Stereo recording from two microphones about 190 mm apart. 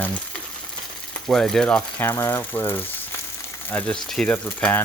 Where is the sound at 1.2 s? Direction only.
5° left (ahead or behind).